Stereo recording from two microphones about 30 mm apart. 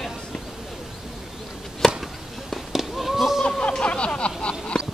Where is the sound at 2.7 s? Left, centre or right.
Centre.